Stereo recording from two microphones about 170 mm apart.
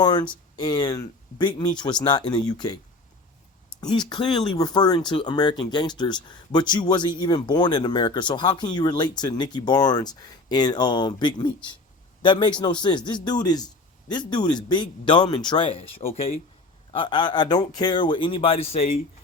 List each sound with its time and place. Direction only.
0.0 s speech: 25° left (ahead or behind)
3.8 s speech: 25° left (ahead or behind)